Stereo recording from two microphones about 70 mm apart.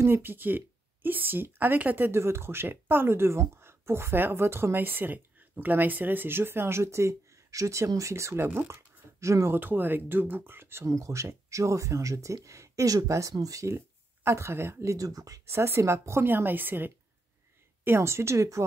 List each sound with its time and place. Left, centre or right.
0.0 s speech: right
9.6 s speech: right
10.9 s speech: right
15.0 s speech: right
15.4 s speech: right
16.3 s a woman's voice: right
17.8 s speech: right